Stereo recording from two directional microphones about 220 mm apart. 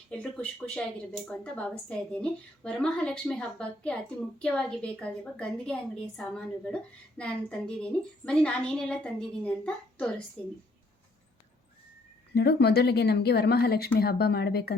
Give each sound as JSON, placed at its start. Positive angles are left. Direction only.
{"t": 0.1, "sound": "speech", "side_deg": 5}
{"t": 12.3, "sound": "a woman's voice", "side_deg": 45}